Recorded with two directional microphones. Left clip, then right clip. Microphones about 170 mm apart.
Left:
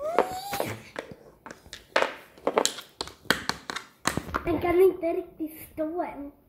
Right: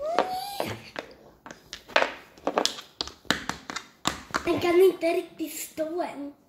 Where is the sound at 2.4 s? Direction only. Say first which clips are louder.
Left 1 dB; 20° left (ahead or behind).